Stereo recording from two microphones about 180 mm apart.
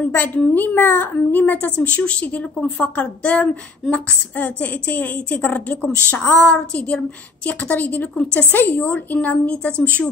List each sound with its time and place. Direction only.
0.0 s a woman's voice: 10° left (ahead or behind)